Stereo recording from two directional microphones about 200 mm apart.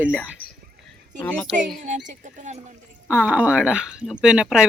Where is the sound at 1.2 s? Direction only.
10° left (ahead or behind).